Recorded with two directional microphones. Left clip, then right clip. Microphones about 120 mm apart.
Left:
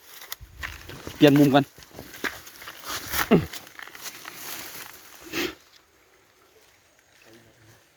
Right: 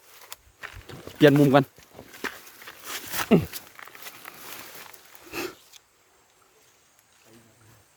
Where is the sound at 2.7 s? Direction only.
90° left.